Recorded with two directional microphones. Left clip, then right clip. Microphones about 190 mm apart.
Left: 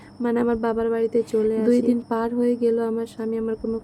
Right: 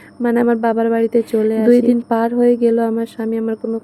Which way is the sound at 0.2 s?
20° right (ahead or behind).